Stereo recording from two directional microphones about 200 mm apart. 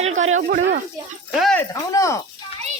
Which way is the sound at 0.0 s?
35° right (ahead or behind).